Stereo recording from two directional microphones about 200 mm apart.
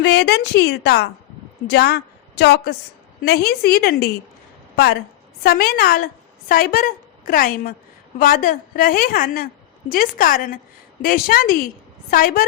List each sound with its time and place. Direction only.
0.0 s a woman's voice: 60° left (ahead or behind)
5.4 s a woman's voice: 50° left (ahead or behind)